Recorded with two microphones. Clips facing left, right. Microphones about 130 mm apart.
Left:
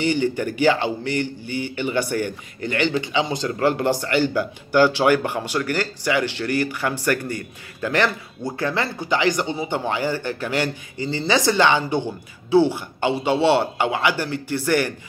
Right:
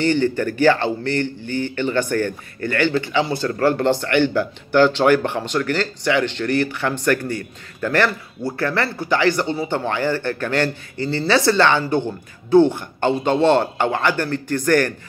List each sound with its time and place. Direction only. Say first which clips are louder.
0.0 s speech: right 3 dB; 15° left (ahead or behind)
6.4 s speech: right 3 dB; 60° right (ahead or behind)
7.8 s speech: right 2 dB; 15° left (ahead or behind)